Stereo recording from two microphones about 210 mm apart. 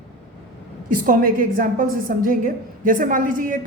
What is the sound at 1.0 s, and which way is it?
A woman's voice, 40° right (ahead or behind).